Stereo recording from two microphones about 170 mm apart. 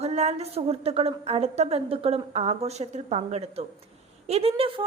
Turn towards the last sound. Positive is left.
turn(degrees=-35)  # may be behind; listen again after turning